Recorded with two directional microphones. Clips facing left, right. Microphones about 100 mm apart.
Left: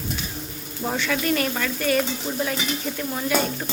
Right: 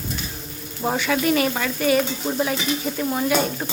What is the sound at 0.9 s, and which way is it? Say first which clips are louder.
Speech: right 3 dB; 5° right (ahead or behind).